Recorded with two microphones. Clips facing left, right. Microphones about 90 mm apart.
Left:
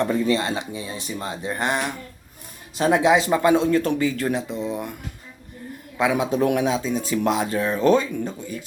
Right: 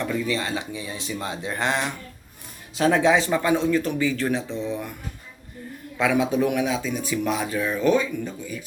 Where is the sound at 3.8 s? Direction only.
45° left (ahead or behind).